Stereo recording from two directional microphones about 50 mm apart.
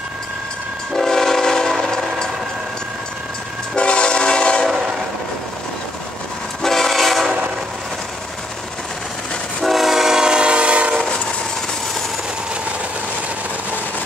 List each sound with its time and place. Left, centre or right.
0.9 s train: centre
3.7 s train: left
6.6 s train: centre
7.2 s train: right
9.6 s train: centre; by 11.0 s right